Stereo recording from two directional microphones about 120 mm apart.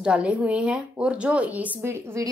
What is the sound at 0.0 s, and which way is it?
Speech, 10° right (ahead or behind).